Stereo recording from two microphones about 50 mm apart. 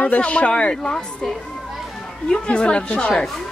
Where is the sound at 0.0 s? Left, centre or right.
Left.